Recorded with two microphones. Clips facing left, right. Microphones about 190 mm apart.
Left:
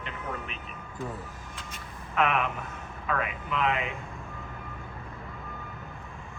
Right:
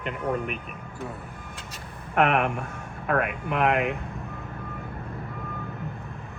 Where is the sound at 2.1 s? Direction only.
55° right (ahead or behind).